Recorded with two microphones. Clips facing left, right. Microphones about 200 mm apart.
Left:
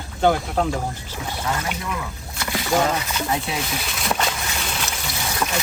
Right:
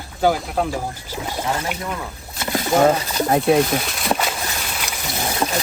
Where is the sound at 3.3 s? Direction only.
55° right (ahead or behind).